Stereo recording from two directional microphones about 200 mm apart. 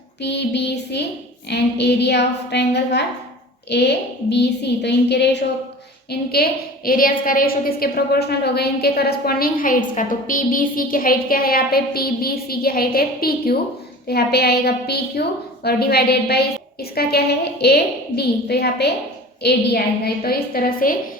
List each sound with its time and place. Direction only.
0.2 s a woman's voice: 55° left (ahead or behind)